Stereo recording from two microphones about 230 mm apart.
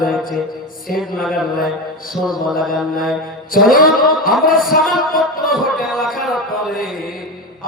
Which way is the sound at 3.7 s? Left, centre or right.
Left.